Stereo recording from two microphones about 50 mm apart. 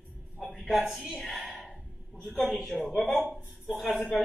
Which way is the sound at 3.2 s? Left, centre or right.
Right.